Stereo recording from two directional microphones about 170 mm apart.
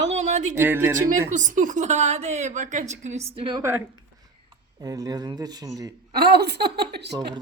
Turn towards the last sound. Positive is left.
turn(degrees=-75)  # may be behind; listen again after turning